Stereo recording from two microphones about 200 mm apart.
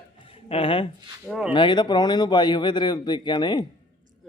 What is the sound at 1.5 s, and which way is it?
A man's voice, 20° left (ahead or behind).